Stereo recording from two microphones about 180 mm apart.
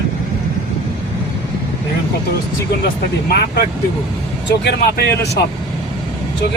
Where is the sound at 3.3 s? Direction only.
60° left (ahead or behind).